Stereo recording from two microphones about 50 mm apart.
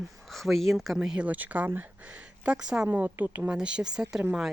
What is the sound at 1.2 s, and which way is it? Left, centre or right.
Speech, right.